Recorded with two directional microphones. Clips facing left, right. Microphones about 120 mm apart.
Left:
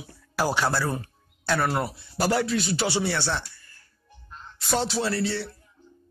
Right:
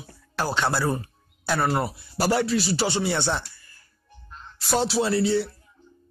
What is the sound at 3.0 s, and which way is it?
Speech, 20° right (ahead or behind).